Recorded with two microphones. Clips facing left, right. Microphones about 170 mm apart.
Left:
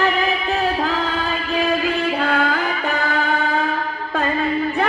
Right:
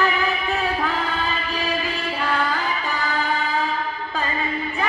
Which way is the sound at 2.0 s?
60° left (ahead or behind).